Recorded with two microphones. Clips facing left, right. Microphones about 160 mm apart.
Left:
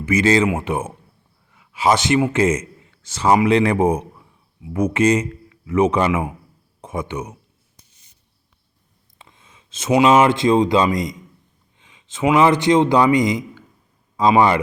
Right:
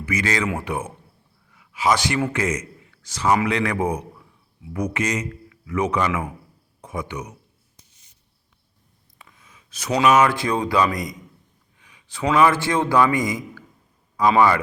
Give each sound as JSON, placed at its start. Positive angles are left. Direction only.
{"t": 0.0, "sound": "a man's voice", "side_deg": 25}
{"t": 9.1, "sound": "a man's voice", "side_deg": 25}